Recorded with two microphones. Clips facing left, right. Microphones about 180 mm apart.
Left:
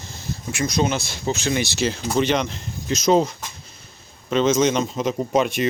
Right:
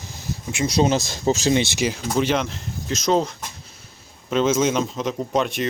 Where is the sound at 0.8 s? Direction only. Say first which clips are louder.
Right 4 dB; 40° right (ahead or behind).